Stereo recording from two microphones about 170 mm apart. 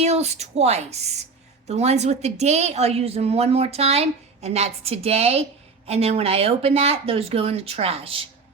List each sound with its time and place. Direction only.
0.0 s a woman's voice: 40° right (ahead or behind)